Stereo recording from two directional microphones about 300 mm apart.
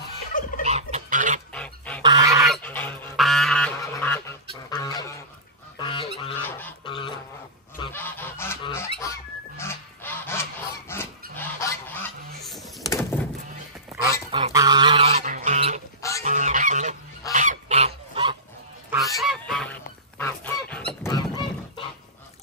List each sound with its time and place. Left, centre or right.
0.3 s fowl: left
0.7 s fowl: right
1.5 s duck: centre
2.0 s goose: centre
2.4 s goose: centre
4.6 s a sound: centre
5.8 s goose: centre
6.4 s a sound: centre
7.8 s goose: centre
12.8 s door: centre
14.0 s goose: centre
19.1 s goose: centre